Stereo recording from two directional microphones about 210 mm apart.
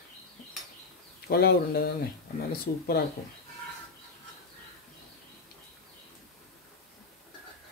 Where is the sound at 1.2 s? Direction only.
50° left (ahead or behind).